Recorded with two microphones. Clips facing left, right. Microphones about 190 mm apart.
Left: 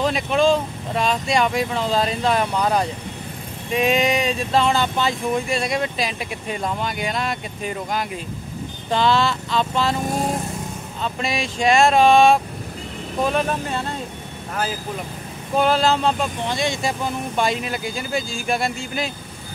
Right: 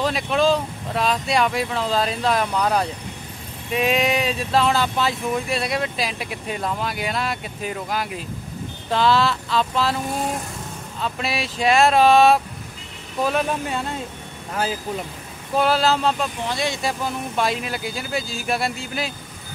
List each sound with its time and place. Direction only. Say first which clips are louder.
0.0 s speech: left 1 dB; centre (ahead or behind)
11.0 s speech: left 1 dB; centre (ahead or behind)
15.5 s speech: left 1 dB; 5° right (ahead or behind)